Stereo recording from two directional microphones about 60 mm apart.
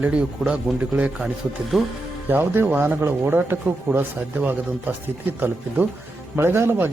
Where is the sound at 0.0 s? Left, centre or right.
Centre.